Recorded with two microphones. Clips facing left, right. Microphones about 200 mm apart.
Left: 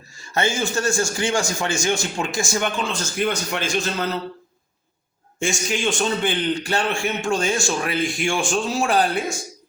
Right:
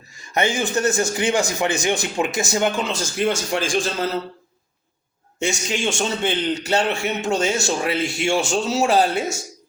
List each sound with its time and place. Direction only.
0.2 s a man's voice: 15° right (ahead or behind)
5.4 s a man's voice: 25° right (ahead or behind)